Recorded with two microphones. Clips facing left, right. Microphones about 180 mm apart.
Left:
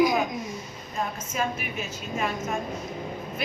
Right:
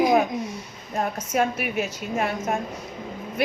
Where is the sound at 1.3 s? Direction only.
65° right (ahead or behind).